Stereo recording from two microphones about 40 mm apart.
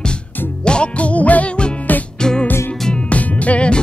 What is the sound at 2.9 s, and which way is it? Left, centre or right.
Music, left.